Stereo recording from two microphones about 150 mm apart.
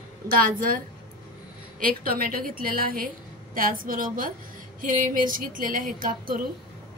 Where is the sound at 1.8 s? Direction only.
75° right (ahead or behind).